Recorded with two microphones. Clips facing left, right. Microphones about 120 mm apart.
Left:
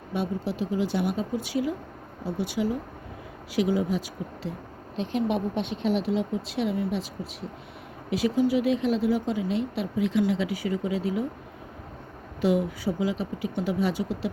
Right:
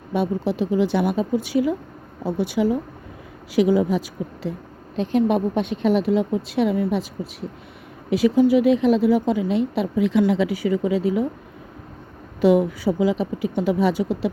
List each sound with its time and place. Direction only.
0.1 s speech: 75° right (ahead or behind)
4.9 s speech: 45° right (ahead or behind)
8.1 s speech: 70° right (ahead or behind)
12.4 s speech: 70° right (ahead or behind)